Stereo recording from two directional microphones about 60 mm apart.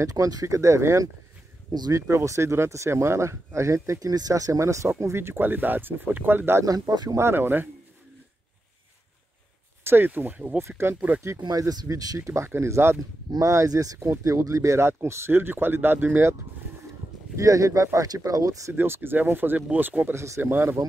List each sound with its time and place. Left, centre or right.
0.0 s speech: right
4.8 s speech: right
6.6 s speech: right
7.2 s speech: right
9.8 s speech: right
11.5 s speech: right
12.4 s speech: right
13.3 s speech: right
17.4 s speech: right
18.7 s speech: right
20.2 s speech: right